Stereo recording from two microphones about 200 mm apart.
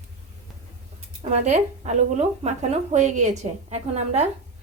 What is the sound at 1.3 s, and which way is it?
Speech, 35° right (ahead or behind).